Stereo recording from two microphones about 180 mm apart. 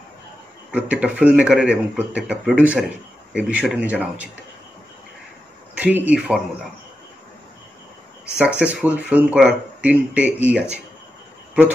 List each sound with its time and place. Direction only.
0.7 s speech: 5° right (ahead or behind)
5.8 s speech: 5° right (ahead or behind)
8.4 s speech: 5° right (ahead or behind)